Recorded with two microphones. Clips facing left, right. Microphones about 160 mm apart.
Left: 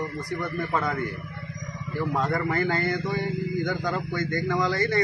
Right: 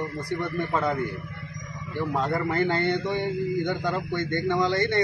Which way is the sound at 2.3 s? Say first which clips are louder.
Right 1 dB; 25° right (ahead or behind).